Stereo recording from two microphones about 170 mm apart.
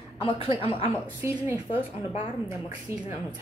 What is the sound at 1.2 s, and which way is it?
Speech, 10° right (ahead or behind).